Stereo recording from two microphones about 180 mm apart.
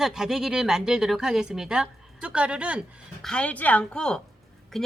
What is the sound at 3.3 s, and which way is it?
A woman's voice, 5° left (ahead or behind).